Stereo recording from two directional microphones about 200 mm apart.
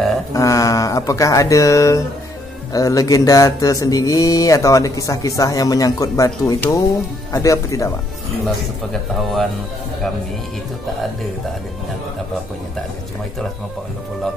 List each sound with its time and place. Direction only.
0.3 s speech: 15° left (ahead or behind)
2.7 s a sound: 15° left (ahead or behind)
9.1 s speech: centre (ahead or behind)